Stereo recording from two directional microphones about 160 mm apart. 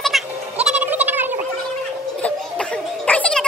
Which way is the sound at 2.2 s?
10° left (ahead or behind).